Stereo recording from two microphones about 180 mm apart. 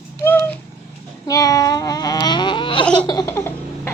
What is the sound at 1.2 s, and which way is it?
Baby cry, 20° left (ahead or behind).